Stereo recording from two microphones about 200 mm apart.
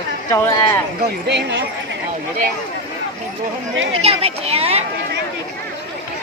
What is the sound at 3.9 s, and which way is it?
Speech, 30° right (ahead or behind).